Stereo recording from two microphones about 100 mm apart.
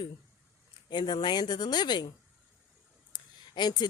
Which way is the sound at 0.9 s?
50° left (ahead or behind).